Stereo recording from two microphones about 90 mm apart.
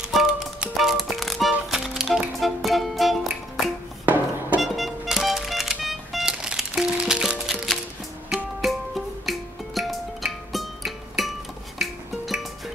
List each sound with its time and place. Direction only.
0.1 s music: 5° right (ahead or behind)
4.0 s music: 20° right (ahead or behind)
4.6 s music: centre (ahead or behind)
8.5 s music: centre (ahead or behind)